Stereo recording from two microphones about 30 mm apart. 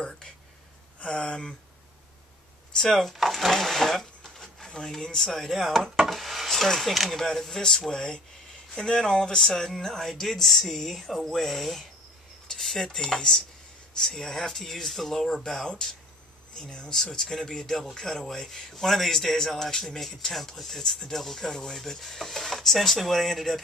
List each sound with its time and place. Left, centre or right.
1.0 s speech: left
2.9 s speech: centre
3.5 s sewing machine: centre
4.7 s speech: centre
5.9 s wood: centre
6.6 s speech: centre
12.4 s cutlery: centre
13.9 s speech: centre
15.6 s speech: left
16.9 s speech: centre